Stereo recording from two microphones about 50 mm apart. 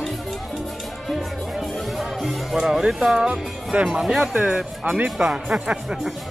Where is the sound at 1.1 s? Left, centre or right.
Centre.